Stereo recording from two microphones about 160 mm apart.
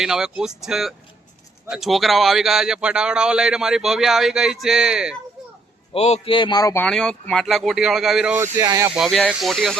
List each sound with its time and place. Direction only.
0.0 s speech: 5° right (ahead or behind)
5.9 s a man's voice: 40° left (ahead or behind); by 6.8 s 25° left (ahead or behind)
6.8 s speech: 5° left (ahead or behind)
8.4 s speech: 20° right (ahead or behind)
9.0 s speech: centre (ahead or behind)